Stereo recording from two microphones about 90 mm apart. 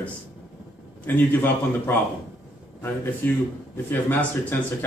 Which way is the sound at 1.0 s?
25° left (ahead or behind).